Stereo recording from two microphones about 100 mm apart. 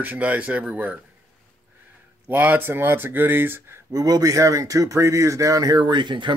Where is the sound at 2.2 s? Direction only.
15° right (ahead or behind).